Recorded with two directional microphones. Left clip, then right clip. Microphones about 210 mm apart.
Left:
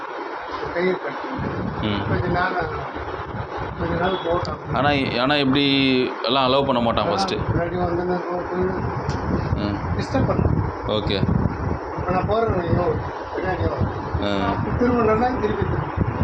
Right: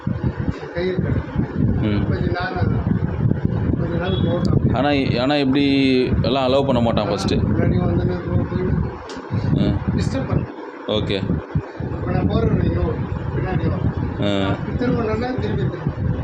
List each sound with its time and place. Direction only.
4.4 s speech: 30° right (ahead or behind)
10.8 s speech: 30° right (ahead or behind)